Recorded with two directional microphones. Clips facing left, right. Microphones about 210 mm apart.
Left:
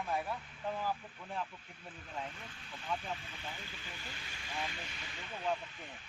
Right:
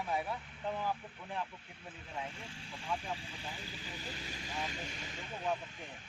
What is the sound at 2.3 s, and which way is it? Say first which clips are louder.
Speech: right 2 dB; 30° right (ahead or behind).